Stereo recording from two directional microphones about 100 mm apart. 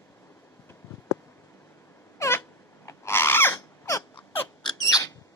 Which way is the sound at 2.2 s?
30° left (ahead or behind).